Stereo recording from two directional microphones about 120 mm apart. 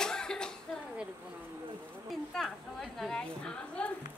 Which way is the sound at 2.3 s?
5° left (ahead or behind).